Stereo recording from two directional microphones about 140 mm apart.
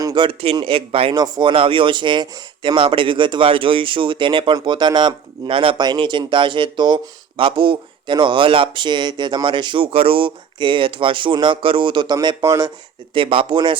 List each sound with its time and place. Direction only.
0.0 s a sound: 30° right (ahead or behind)
0.5 s speech: 40° right (ahead or behind)
13.1 s speech: 40° right (ahead or behind)